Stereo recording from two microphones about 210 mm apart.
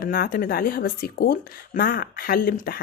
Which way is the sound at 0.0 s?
45° left (ahead or behind).